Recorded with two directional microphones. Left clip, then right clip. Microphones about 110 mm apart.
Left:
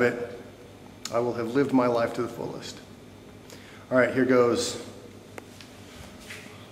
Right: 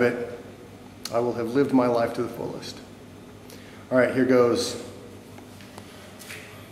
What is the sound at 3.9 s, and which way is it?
Speech, centre (ahead or behind).